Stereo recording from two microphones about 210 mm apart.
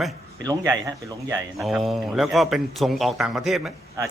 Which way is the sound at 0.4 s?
15° right (ahead or behind).